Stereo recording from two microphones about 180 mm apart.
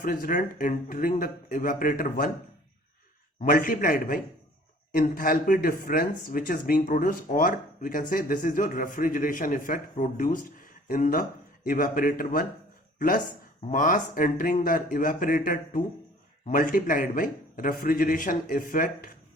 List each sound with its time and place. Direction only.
0.0 s speech: 50° left (ahead or behind)
3.4 s speech: 50° left (ahead or behind)